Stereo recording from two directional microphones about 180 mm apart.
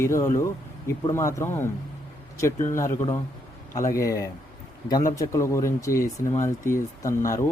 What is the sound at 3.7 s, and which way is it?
Speech, 15° left (ahead or behind).